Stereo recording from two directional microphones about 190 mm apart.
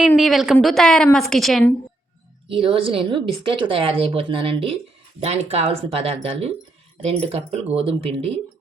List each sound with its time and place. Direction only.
0.2 s a woman's voice: centre (ahead or behind)
2.5 s speech: 30° right (ahead or behind)